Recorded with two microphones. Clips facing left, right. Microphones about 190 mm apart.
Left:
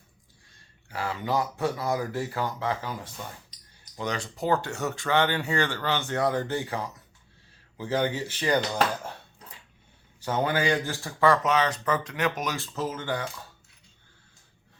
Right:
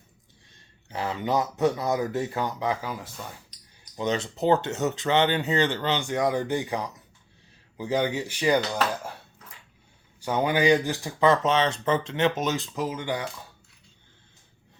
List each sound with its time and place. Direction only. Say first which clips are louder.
0.9 s speech: right 2 dB; 20° right (ahead or behind)
3.9 s speech: right 5 dB; 20° right (ahead or behind)
10.2 s speech: right 2 dB; 15° right (ahead or behind)